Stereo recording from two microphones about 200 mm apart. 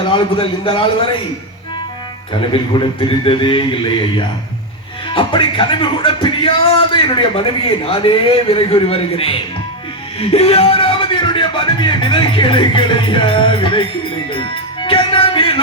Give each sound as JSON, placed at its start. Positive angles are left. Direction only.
{"t": 0.1, "sound": "music", "side_deg": 25}
{"t": 2.5, "sound": "music", "side_deg": 25}
{"t": 10.2, "sound": "speech", "side_deg": 30}
{"t": 14.8, "sound": "music", "side_deg": 25}